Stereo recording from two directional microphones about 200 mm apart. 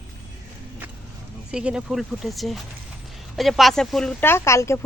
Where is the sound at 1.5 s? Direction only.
5° right (ahead or behind).